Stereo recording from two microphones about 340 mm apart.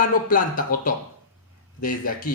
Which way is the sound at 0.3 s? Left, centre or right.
Left.